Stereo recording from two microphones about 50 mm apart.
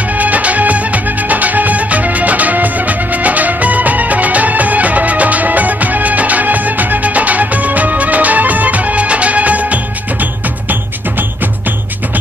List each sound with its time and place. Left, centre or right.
0.2 s music: right